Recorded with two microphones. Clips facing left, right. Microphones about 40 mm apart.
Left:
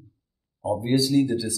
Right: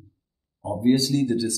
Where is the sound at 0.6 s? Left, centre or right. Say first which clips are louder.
Right 2 dB; centre.